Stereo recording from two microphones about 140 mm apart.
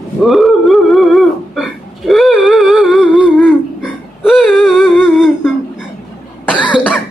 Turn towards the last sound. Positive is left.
turn(degrees=-5)  # may be behind; listen again after turning